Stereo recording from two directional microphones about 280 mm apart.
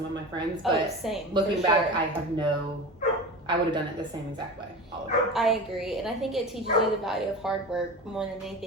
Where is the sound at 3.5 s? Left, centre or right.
Centre.